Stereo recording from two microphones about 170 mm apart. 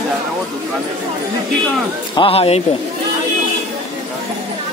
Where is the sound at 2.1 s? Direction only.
35° left (ahead or behind).